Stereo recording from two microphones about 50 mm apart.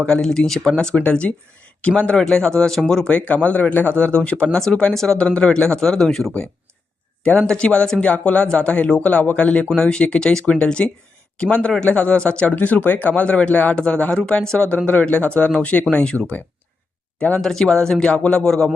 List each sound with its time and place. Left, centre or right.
0.0 s speech: centre
3.1 s speech: left; by 6.3 s centre
7.3 s speech: centre
10.4 s speech: left
12.5 s speech: left
17.4 s speech: centre